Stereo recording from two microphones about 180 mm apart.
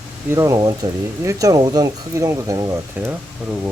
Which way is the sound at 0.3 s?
20° right (ahead or behind).